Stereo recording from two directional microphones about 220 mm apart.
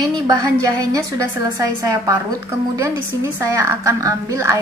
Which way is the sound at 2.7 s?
15° right (ahead or behind).